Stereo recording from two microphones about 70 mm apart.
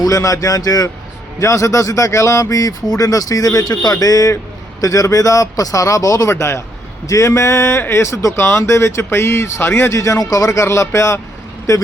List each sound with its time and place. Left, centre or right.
0.0 s speech: left
1.4 s a man's voice: left
6.3 s a man's voice: left
9.9 s a man's voice: left